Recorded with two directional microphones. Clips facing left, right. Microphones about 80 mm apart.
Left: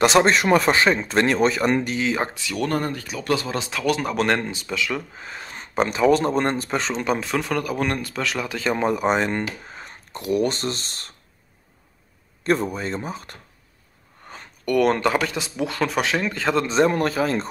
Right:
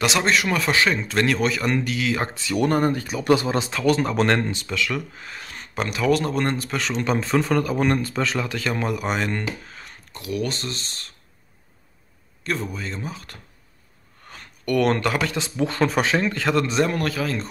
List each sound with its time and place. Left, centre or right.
0.0 s a man's voice: left; by 2.4 s centre
2.4 s speech: centre
4.5 s speech: centre
7.0 s speech: centre
8.5 s speech: centre
10.1 s a man's voice: left
12.4 s a man's voice: left
14.3 s speech: centre
15.5 s speech: centre
16.3 s speech: centre